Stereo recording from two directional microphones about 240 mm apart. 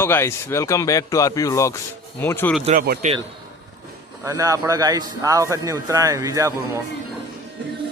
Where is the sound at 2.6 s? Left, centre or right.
Right.